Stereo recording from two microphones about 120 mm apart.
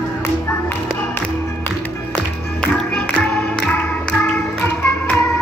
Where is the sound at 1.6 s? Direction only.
10° left (ahead or behind).